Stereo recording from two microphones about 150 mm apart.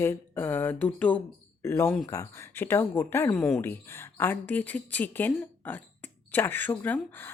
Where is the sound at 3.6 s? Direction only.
15° left (ahead or behind).